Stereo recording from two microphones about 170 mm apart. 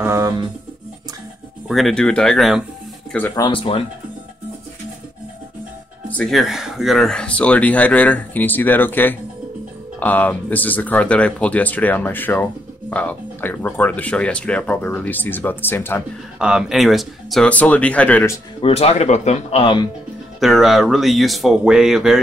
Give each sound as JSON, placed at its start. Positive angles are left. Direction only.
{"t": 0.0, "sound": "music", "side_deg": -20}
{"t": 1.7, "sound": "speech", "side_deg": 0}
{"t": 3.4, "sound": "speech", "side_deg": 30}
{"t": 6.0, "sound": "speech", "side_deg": 5}
{"t": 16.3, "sound": "speech", "side_deg": -5}
{"t": 18.6, "sound": "speech", "side_deg": 40}
{"t": 20.3, "sound": "speech", "side_deg": 0}